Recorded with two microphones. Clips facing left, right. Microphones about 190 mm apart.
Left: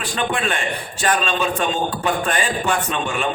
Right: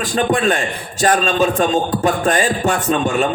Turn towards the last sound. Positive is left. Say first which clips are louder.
# right 6 dB
turn(degrees=-40)  # may be behind; listen again after turning